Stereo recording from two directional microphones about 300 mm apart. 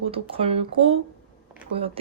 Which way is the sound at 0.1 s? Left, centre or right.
Centre.